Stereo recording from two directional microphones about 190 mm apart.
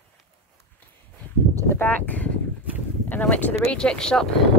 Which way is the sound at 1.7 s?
10° left (ahead or behind).